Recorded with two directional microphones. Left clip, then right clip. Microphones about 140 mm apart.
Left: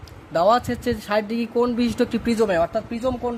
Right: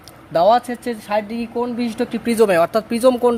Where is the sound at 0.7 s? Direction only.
10° left (ahead or behind).